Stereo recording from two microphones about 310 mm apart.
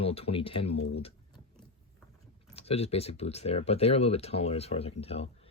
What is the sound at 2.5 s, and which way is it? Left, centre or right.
Speech, centre.